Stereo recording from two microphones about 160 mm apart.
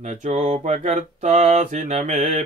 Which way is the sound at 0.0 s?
50° right (ahead or behind).